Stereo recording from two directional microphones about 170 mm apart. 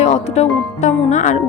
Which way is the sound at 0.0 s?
40° left (ahead or behind).